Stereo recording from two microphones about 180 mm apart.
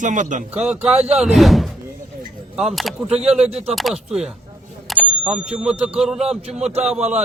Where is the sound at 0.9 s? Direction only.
35° right (ahead or behind).